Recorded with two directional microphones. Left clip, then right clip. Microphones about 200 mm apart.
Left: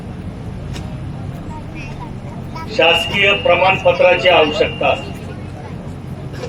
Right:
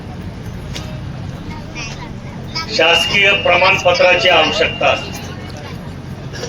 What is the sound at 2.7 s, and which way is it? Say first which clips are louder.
A man's voice: right 1 dB; 15° right (ahead or behind).